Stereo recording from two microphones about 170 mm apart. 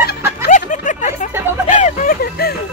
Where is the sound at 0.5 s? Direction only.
50° left (ahead or behind).